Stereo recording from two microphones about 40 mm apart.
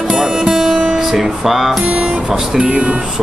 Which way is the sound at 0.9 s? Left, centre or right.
Centre.